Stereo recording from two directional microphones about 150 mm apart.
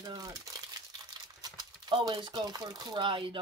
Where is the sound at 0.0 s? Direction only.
25° right (ahead or behind).